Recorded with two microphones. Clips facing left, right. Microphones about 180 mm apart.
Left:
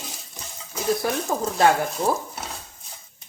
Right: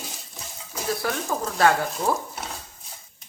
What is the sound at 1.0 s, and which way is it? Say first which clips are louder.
Speech: left 2 dB; 20° left (ahead or behind).